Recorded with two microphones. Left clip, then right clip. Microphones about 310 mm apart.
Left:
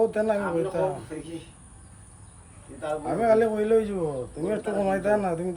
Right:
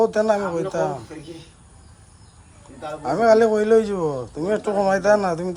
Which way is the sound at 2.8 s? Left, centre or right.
Centre.